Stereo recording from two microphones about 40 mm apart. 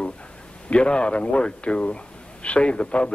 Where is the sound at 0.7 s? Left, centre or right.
Left.